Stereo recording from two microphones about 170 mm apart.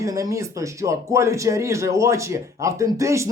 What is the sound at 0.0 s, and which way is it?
Speech, 20° right (ahead or behind).